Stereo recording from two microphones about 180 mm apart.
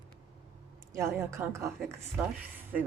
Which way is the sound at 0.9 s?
15° right (ahead or behind).